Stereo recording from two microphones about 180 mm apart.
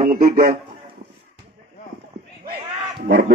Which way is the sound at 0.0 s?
55° right (ahead or behind).